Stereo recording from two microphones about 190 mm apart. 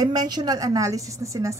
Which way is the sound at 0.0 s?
20° right (ahead or behind).